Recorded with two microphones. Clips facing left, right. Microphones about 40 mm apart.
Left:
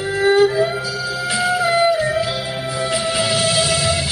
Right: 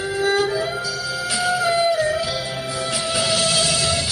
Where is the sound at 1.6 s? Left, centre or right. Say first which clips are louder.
Left 3 dB; left.